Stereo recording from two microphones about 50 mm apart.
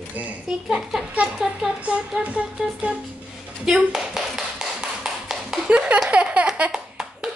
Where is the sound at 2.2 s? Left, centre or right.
Right.